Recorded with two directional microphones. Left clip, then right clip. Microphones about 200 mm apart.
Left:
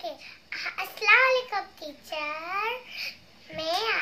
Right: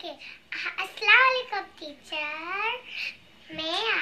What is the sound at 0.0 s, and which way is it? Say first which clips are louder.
Child singing: left 2 dB; 15° left (ahead or behind).